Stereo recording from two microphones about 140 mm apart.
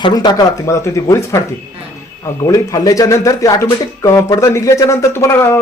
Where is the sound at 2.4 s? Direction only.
25° left (ahead or behind).